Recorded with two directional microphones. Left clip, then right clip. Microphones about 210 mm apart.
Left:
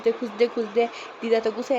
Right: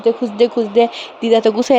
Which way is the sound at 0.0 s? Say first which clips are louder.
Right 8 dB; 30° right (ahead or behind).